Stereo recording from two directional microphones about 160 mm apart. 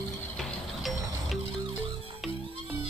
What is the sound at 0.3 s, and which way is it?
Music, centre (ahead or behind).